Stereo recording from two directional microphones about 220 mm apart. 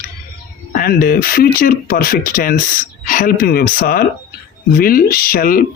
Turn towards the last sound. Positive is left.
turn(degrees=40)  # may be behind; listen again after turning